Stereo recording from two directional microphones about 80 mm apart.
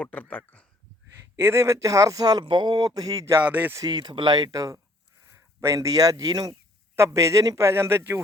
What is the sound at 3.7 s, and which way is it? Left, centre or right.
Speech, right.